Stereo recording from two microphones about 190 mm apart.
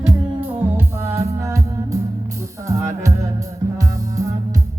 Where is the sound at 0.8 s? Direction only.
15° right (ahead or behind).